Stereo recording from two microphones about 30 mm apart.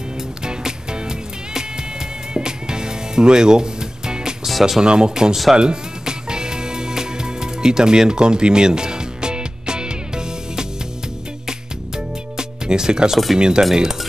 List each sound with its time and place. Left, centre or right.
0.4 s music: right
4.5 s music: centre
4.8 s speech: right
5.3 s speech: centre
5.6 s music: right
12.4 s music: right
13.4 s speech: right